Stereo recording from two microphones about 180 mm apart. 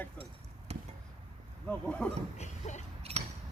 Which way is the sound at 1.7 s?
5° left (ahead or behind).